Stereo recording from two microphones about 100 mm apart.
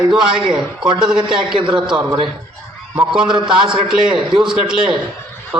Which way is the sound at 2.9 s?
10° right (ahead or behind).